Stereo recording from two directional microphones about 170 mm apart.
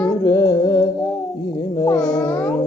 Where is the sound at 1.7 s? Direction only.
20° left (ahead or behind).